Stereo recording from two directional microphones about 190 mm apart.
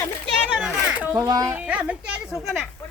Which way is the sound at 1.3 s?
20° right (ahead or behind).